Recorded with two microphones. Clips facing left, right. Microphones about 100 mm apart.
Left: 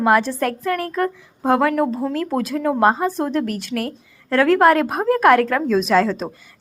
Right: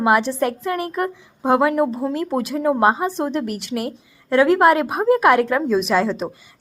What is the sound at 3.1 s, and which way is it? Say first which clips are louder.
A woman's voice: left 1 dB; 20° right (ahead or behind).